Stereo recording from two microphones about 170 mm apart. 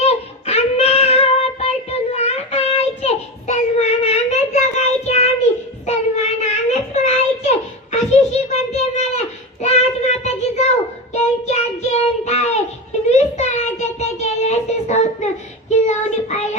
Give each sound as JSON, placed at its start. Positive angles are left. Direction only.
{"t": 0.0, "sound": "child singing", "side_deg": 40}